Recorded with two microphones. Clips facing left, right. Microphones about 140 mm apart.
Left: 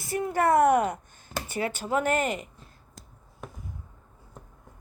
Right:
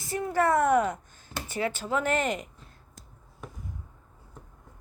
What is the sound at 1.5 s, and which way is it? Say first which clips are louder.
Speech: right 1 dB; 10° left (ahead or behind).